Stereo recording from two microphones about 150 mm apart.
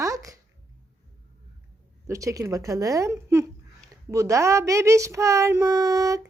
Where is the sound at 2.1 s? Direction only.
20° right (ahead or behind).